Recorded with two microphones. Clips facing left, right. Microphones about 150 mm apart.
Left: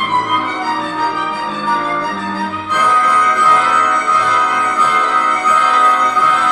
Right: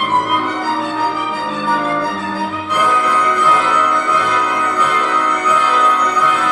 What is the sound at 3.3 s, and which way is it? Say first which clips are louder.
Music: left 1 dB; 20° right (ahead or behind).